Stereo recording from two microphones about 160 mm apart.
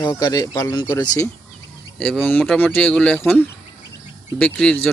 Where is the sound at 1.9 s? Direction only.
5° left (ahead or behind).